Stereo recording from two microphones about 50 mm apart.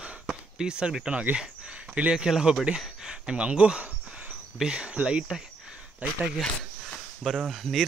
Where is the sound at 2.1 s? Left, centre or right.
Centre.